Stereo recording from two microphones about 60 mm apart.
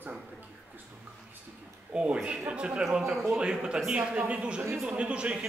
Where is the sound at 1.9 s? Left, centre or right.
Centre.